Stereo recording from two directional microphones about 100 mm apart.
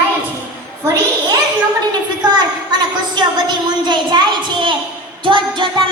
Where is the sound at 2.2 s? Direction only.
45° right (ahead or behind).